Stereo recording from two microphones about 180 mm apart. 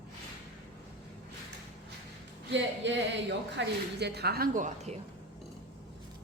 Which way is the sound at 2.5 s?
85° right.